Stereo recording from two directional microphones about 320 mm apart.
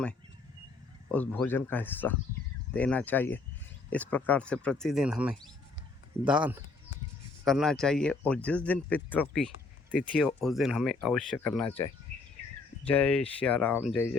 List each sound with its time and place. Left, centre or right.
1.1 s speech: centre
12.9 s speech: centre